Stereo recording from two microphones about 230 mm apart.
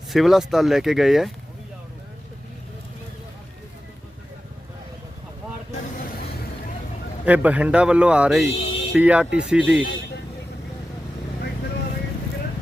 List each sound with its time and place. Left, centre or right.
0.1 s speech: centre
7.3 s speech: centre
8.4 s music: left
8.9 s speech: centre
9.9 s vehicle: left